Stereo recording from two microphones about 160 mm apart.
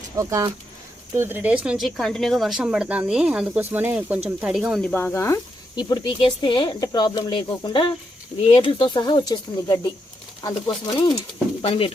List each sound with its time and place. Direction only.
0.2 s speech: 20° right (ahead or behind)
3.1 s stir: 5° right (ahead or behind)
4.4 s speech: 5° right (ahead or behind)
4.8 s speech: 5° left (ahead or behind); by 9.9 s 25° left (ahead or behind)
11.6 s speech: 35° left (ahead or behind)